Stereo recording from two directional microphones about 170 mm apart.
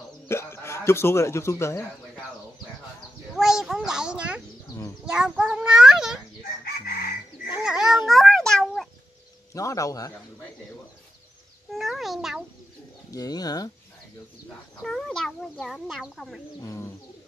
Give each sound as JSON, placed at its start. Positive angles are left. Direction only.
{"t": 0.3, "sound": "speech", "side_deg": 15}
{"t": 3.3, "sound": "a child's voice", "side_deg": 0}
{"t": 6.6, "sound": "chicken", "side_deg": 60}
{"t": 7.5, "sound": "a sound", "side_deg": -5}
{"t": 9.5, "sound": "a man's voice", "side_deg": 20}
{"t": 11.7, "sound": "a child's voice", "side_deg": 0}
{"t": 13.1, "sound": "a man's voice", "side_deg": 20}
{"t": 14.8, "sound": "a child's voice", "side_deg": 5}
{"t": 16.6, "sound": "bird", "side_deg": 20}